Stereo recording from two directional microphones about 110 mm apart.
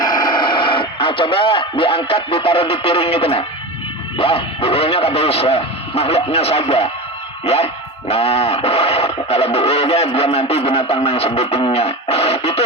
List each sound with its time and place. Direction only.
0.0 s speech: 40° left (ahead or behind); by 12.6 s 65° left (ahead or behind)